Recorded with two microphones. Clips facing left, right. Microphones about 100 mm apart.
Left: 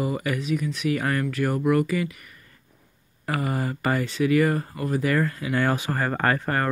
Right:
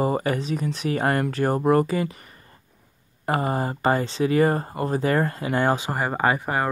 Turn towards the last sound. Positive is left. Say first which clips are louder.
# right 1 dB
turn(degrees=-15)  # may be behind; listen again after turning